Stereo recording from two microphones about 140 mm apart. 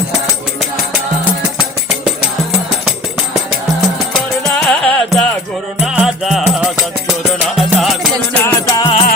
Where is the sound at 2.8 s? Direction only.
5° right (ahead or behind).